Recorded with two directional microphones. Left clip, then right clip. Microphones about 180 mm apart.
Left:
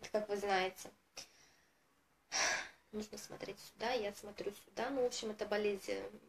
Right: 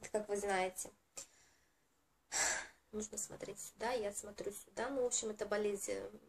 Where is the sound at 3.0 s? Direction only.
15° right (ahead or behind).